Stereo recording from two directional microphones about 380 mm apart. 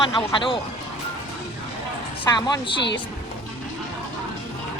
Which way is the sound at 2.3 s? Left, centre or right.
Centre.